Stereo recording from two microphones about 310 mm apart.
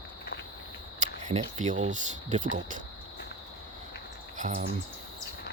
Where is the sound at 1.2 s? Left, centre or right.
Right.